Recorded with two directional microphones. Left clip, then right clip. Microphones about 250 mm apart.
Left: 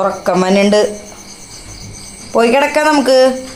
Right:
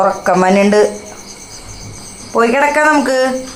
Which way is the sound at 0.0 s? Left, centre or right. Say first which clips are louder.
Right 2 dB; centre.